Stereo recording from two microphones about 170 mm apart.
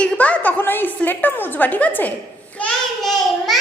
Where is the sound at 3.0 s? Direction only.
Centre (ahead or behind).